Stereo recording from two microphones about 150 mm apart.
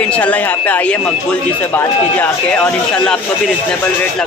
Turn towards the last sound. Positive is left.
turn(degrees=5)  # may be behind; listen again after turning